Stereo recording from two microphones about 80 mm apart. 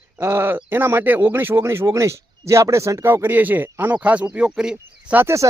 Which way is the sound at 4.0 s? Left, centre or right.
Centre.